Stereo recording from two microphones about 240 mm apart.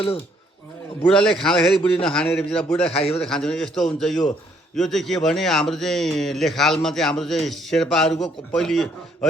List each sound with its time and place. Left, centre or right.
1.0 s speech: centre
2.9 s a man's voice: left
3.2 s speech: centre